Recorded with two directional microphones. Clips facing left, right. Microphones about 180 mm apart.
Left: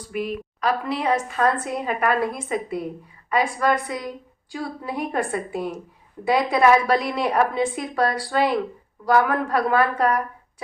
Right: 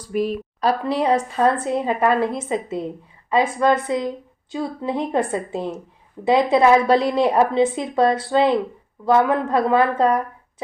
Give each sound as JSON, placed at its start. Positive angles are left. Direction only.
{"t": 0.1, "sound": "a woman's voice", "side_deg": -35}